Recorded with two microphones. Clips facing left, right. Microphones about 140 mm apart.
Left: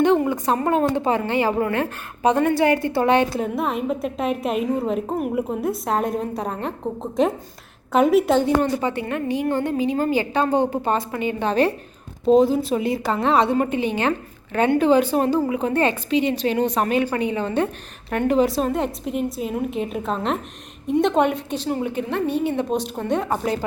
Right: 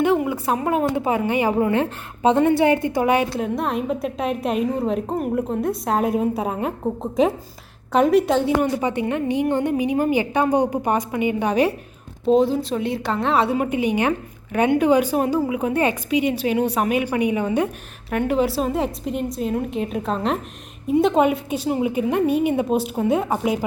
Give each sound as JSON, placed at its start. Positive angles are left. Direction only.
{"t": 0.0, "sound": "a woman's voice", "side_deg": -5}
{"t": 3.2, "sound": "a woman's voice", "side_deg": 0}
{"t": 8.6, "sound": "a woman's voice", "side_deg": -15}
{"t": 12.2, "sound": "a woman's voice", "side_deg": 0}